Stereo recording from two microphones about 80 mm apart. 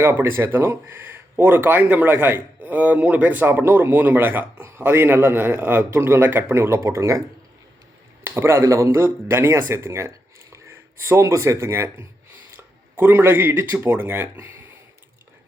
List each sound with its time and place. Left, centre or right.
0.0 s speech: right
8.2 s speech: right